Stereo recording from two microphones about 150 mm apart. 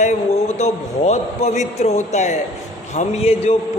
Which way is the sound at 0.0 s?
50° left (ahead or behind).